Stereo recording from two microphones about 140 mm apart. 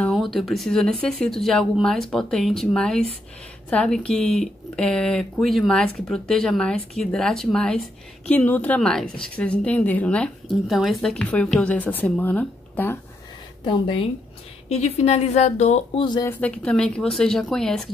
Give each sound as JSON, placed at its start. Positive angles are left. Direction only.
{"t": 0.0, "sound": "speech", "side_deg": 0}
{"t": 13.7, "sound": "speech", "side_deg": 35}
{"t": 14.7, "sound": "a woman's voice", "side_deg": 50}
{"t": 16.0, "sound": "speech", "side_deg": 35}
{"t": 16.3, "sound": "speech", "side_deg": 10}